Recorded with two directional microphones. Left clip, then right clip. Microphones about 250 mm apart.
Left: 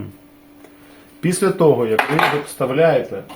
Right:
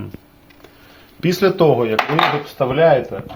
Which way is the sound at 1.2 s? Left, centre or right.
Centre.